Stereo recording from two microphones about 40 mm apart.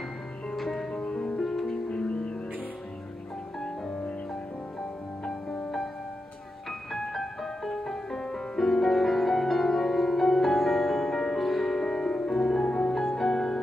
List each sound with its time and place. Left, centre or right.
0.6 s music: centre
1.0 s music: left
1.4 s music: centre
1.9 s music: left
5.2 s music: left
6.9 s music: centre